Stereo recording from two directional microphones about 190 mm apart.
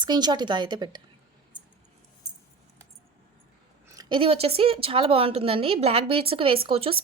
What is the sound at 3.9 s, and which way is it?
Speech, 20° right (ahead or behind).